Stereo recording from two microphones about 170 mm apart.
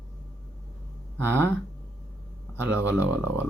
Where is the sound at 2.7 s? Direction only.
15° left (ahead or behind).